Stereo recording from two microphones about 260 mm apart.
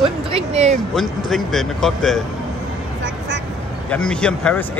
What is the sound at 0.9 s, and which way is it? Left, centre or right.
Speech, centre.